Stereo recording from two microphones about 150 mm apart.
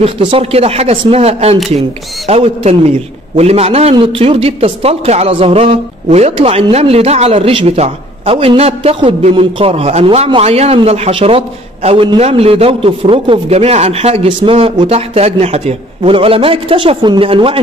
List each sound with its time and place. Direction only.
0.0 s speech: 40° right (ahead or behind)